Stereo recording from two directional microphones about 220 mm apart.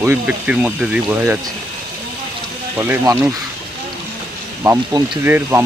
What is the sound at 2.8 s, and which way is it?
Speech, 10° right (ahead or behind).